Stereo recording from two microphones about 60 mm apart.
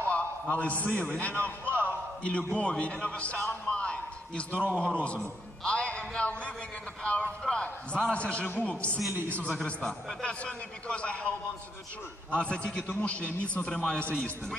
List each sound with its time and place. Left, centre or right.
0.1 s a sound: left
0.9 s a man's voice: left
1.3 s music: right
1.9 s a sound: centre
2.8 s a man's voice: left
3.6 s a sound: centre
4.5 s a man's voice: right
5.6 s music: centre
7.0 s a man's voice: centre
9.1 s a man's voice: right
9.7 s a man's voice: left
12.4 s a man's voice: centre